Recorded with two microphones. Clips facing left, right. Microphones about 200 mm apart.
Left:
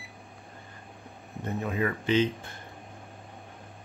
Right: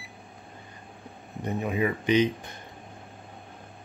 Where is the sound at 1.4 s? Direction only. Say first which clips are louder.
Right 2 dB; 15° right (ahead or behind).